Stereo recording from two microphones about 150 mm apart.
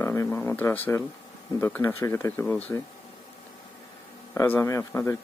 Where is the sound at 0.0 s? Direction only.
15° left (ahead or behind).